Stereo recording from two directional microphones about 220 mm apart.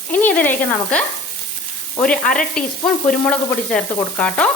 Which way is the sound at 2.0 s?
5° left (ahead or behind).